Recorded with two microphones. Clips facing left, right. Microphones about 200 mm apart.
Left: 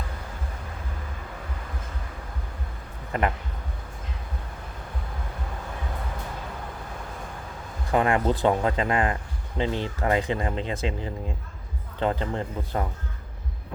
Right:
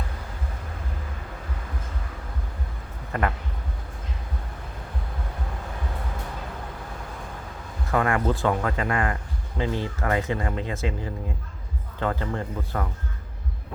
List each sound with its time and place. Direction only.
3.1 s speech: 20° left (ahead or behind)
7.9 s speech: 20° left (ahead or behind)